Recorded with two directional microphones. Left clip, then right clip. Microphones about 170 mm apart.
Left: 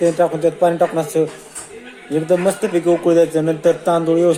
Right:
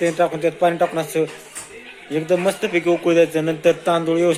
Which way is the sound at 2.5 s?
10° left (ahead or behind).